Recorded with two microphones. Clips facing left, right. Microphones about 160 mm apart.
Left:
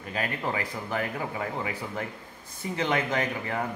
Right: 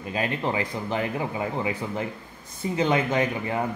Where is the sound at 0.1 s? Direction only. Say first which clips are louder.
Right 4 dB; 25° right (ahead or behind).